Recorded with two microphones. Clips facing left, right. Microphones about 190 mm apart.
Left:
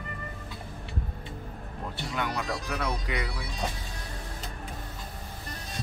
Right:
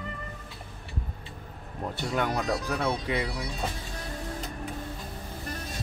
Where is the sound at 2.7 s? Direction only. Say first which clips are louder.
Right 3 dB; 30° right (ahead or behind).